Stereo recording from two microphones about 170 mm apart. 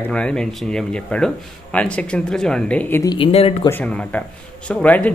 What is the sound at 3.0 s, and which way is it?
Speech, 30° left (ahead or behind).